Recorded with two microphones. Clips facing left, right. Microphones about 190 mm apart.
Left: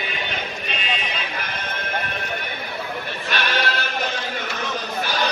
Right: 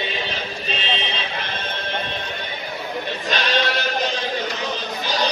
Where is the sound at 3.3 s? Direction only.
20° right (ahead or behind).